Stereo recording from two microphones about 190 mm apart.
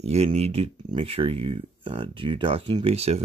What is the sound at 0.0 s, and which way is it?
Speech, 35° right (ahead or behind).